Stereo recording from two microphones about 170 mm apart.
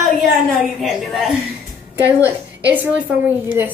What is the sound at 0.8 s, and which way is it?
A woman's voice, centre (ahead or behind).